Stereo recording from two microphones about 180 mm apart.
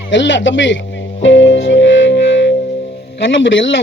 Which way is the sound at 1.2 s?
90° left.